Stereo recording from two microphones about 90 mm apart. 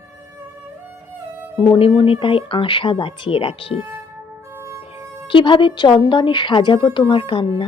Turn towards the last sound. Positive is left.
turn(degrees=70)  # may be behind; listen again after turning